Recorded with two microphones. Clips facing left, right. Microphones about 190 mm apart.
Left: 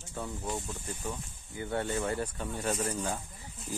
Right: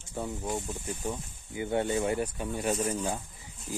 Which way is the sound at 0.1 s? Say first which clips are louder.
Right 3 dB; 15° right (ahead or behind).